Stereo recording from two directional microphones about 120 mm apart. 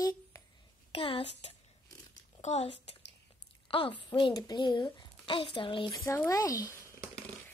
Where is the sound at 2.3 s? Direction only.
60° left (ahead or behind).